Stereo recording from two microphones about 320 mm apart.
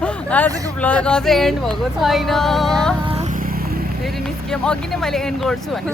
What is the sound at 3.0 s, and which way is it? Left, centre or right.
Vehicle, centre.